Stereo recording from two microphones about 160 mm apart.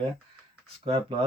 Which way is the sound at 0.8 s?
35° right (ahead or behind).